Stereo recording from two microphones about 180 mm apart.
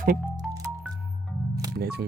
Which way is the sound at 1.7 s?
65° right (ahead or behind).